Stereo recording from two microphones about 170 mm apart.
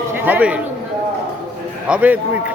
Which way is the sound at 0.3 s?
10° right (ahead or behind).